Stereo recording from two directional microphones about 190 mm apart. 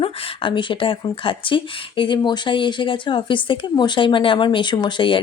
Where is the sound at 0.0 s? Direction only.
25° left (ahead or behind).